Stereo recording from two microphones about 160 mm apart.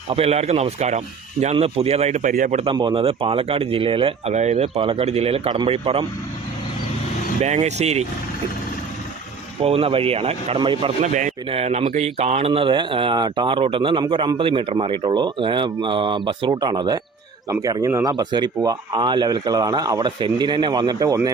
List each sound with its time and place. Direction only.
0.1 s speech: 40° right (ahead or behind)
2.7 s speech: 30° right (ahead or behind)
7.4 s speech: 45° right (ahead or behind)
9.6 s speech: 35° right (ahead or behind)
11.0 s speech: 50° right (ahead or behind)
11.4 s speech: 40° right (ahead or behind); by 21.2 s 25° right (ahead or behind)